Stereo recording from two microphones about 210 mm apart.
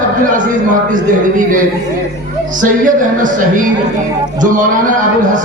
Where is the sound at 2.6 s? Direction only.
40° right (ahead or behind).